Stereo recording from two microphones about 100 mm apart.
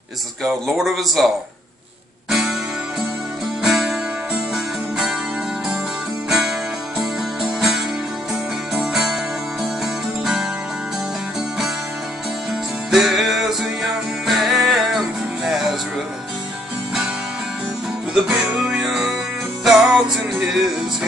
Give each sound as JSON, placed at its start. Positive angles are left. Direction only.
{"t": 0.4, "sound": "speech", "side_deg": 0}
{"t": 3.6, "sound": "music", "side_deg": -5}
{"t": 6.2, "sound": "music", "side_deg": -5}
{"t": 8.7, "sound": "music", "side_deg": -5}
{"t": 10.2, "sound": "music", "side_deg": -10}
{"t": 12.9, "sound": "music", "side_deg": 0}
{"t": 18.1, "sound": "music", "side_deg": -5}